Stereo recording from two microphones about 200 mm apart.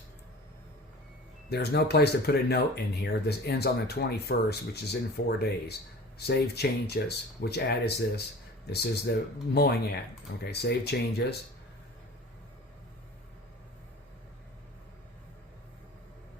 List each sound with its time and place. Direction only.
1.5 s speech: 55° left (ahead or behind)